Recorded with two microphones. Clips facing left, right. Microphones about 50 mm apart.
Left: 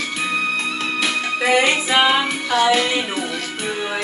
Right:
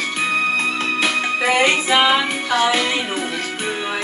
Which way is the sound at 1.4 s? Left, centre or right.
Centre.